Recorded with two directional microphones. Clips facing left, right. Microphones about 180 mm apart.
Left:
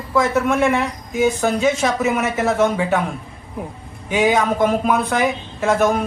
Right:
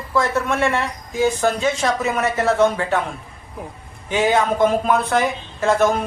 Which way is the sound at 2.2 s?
20° left (ahead or behind).